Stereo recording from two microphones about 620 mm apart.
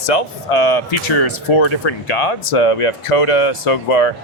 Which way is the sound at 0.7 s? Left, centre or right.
Left.